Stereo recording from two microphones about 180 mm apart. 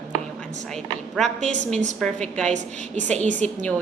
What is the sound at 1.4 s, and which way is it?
Speech, 40° right (ahead or behind).